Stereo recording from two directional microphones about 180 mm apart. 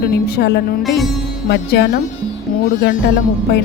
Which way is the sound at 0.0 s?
60° left (ahead or behind).